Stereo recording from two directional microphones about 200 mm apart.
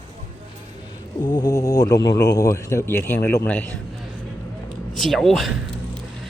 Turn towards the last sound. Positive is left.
turn(degrees=0)  # may be behind; listen again after turning